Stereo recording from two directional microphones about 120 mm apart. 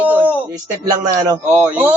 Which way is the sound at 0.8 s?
30° right (ahead or behind).